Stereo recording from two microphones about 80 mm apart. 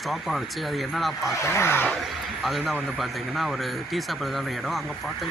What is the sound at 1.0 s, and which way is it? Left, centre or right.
Speech, centre.